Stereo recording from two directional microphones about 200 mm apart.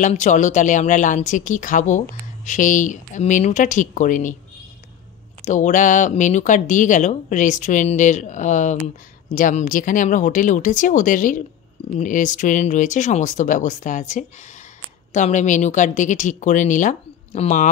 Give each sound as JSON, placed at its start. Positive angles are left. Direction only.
{"t": 0.0, "sound": "speech", "side_deg": 35}
{"t": 5.4, "sound": "speech", "side_deg": 40}